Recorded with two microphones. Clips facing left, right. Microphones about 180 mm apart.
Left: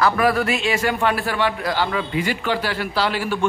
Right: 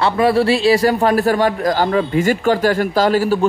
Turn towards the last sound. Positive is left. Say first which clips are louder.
# right 8 dB
turn(degrees=-40)  # may be behind; listen again after turning